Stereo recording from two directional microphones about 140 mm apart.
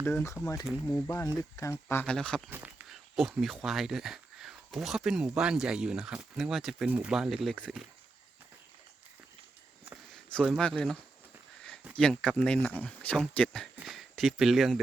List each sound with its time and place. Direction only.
0.0 s speech: 15° left (ahead or behind)
2.1 s speech: 5° left (ahead or behind)
2.5 s a sound: 10° right (ahead or behind)
3.2 s speech: centre (ahead or behind)
10.6 s speech: 5° left (ahead or behind)
11.9 s speech: 5° left (ahead or behind)